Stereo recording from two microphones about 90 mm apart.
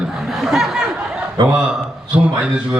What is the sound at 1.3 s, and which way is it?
Speech, 45° right (ahead or behind).